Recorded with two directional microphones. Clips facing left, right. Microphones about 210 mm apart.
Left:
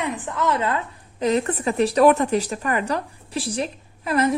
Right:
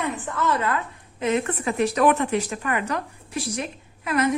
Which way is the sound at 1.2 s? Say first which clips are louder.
Left 3 dB; 35° left (ahead or behind).